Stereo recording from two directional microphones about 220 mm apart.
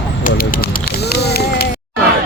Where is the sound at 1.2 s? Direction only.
45° left (ahead or behind).